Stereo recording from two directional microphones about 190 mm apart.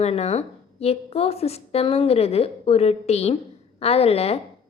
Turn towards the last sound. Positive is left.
turn(degrees=35)  # may be behind; listen again after turning